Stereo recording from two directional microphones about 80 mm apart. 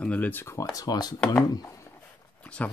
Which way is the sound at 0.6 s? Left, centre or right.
Left.